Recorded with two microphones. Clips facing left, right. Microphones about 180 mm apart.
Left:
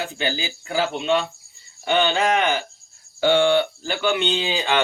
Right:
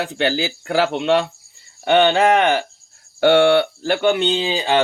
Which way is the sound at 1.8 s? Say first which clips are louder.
Right 6 dB; 65° right (ahead or behind).